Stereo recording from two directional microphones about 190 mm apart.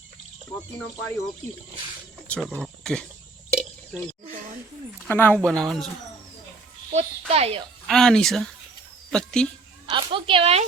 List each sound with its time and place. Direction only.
2.2 s cricket: 5° left (ahead or behind)
2.6 s speech: 5° left (ahead or behind)
5.0 s speech: 10° left (ahead or behind)
6.9 s a child's voice: 35° right (ahead or behind)
7.9 s speech: 5° left (ahead or behind)
9.9 s speech: 25° right (ahead or behind)